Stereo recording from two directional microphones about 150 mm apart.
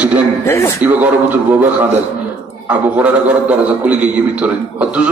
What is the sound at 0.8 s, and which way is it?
A man's voice, 10° right (ahead or behind).